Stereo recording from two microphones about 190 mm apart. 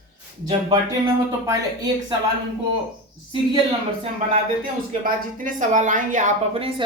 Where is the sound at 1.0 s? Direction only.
20° right (ahead or behind).